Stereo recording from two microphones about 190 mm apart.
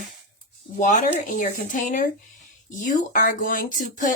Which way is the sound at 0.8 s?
40° left (ahead or behind).